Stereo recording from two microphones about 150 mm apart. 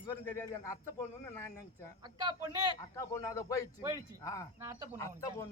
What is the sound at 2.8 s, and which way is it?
A man's voice, 20° left (ahead or behind).